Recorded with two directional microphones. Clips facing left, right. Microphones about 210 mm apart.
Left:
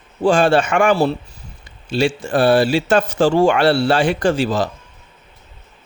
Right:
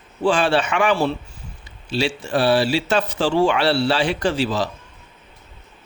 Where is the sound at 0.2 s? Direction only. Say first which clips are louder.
Left 4 dB; 45° left (ahead or behind).